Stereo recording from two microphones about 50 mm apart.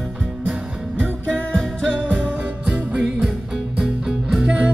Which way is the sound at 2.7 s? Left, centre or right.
Centre.